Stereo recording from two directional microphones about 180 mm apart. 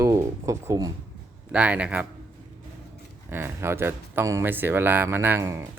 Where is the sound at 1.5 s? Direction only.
5° right (ahead or behind).